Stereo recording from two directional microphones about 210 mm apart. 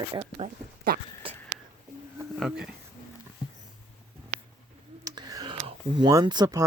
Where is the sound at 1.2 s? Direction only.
25° right (ahead or behind).